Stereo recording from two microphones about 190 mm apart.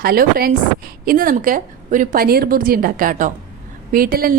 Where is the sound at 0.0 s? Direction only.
50° right (ahead or behind).